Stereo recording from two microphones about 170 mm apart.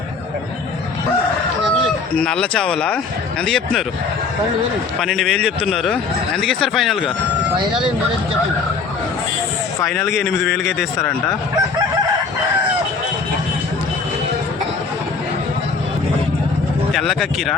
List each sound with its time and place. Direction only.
2.1 s speech: 5° left (ahead or behind)
4.9 s speech: centre (ahead or behind)
9.8 s speech: centre (ahead or behind)
16.9 s speech: centre (ahead or behind)